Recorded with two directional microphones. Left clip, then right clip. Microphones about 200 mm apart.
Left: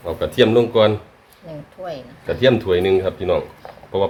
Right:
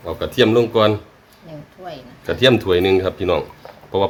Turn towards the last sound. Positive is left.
turn(degrees=-25)  # may be behind; listen again after turning